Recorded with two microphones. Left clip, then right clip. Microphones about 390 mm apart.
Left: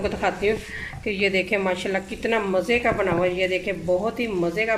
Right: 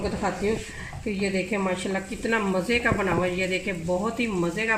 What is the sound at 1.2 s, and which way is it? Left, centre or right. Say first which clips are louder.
Speech: left 5 dB; left.